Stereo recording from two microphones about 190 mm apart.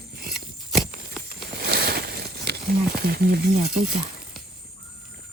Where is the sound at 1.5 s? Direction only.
55° right (ahead or behind).